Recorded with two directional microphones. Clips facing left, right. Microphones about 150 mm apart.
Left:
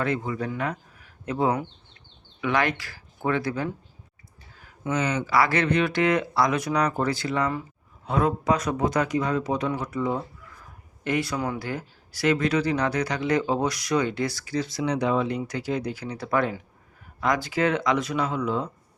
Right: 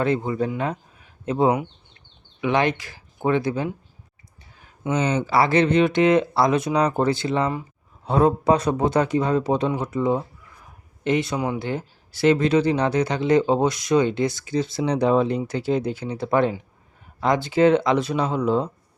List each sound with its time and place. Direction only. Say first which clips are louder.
0.0 s speech: right 5 dB; 25° right (ahead or behind)